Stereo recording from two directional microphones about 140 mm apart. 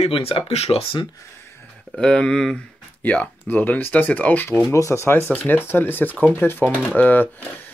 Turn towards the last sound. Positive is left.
turn(degrees=10)  # may be behind; listen again after turning